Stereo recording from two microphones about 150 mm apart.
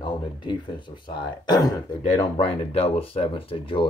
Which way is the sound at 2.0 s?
40° left (ahead or behind).